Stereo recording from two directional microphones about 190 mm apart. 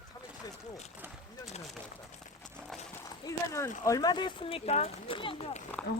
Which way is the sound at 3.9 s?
20° left (ahead or behind).